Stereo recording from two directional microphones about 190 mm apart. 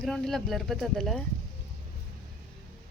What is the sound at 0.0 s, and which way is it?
Speech, centre (ahead or behind).